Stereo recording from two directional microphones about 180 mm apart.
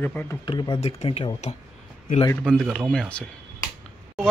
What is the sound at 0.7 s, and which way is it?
Speech, 30° left (ahead or behind).